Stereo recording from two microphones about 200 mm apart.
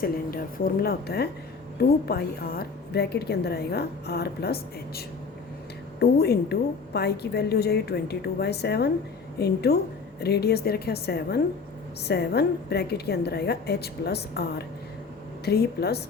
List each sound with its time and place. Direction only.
0.0 s a woman's voice: 45° left (ahead or behind)
15.4 s a woman's voice: 55° left (ahead or behind)